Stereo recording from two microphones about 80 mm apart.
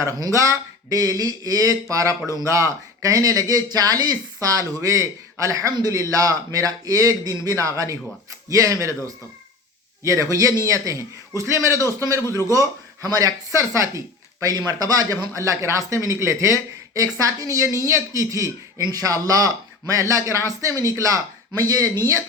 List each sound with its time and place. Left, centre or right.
0.2 s speech: right
2.2 s speech: left
2.5 s speech: right
10.0 s speech: right
14.4 s speech: right